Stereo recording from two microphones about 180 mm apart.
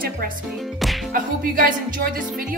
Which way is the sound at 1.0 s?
50° right (ahead or behind).